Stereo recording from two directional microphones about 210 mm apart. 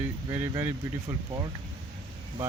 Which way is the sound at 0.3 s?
15° right (ahead or behind).